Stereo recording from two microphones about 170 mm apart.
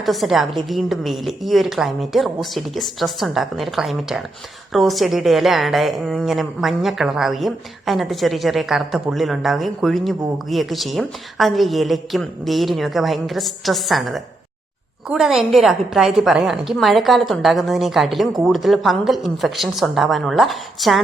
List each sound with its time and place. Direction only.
0.0 s a woman's voice: centre (ahead or behind)